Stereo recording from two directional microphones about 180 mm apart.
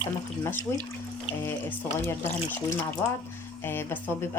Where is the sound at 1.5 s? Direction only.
15° left (ahead or behind).